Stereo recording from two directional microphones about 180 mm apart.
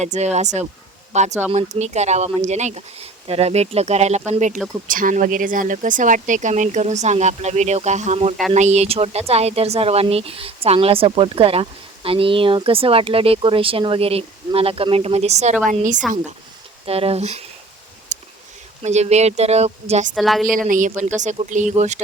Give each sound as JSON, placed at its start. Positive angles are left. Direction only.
{"t": 0.0, "sound": "speech", "side_deg": -40}
{"t": 16.8, "sound": "speech", "side_deg": -30}
{"t": 18.1, "sound": "a sound", "side_deg": -45}
{"t": 18.8, "sound": "speech", "side_deg": -35}
{"t": 20.1, "sound": "a woman's voice", "side_deg": 0}
{"t": 20.5, "sound": "speech", "side_deg": -50}